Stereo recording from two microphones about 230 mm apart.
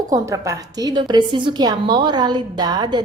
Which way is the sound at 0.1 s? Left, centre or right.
Centre.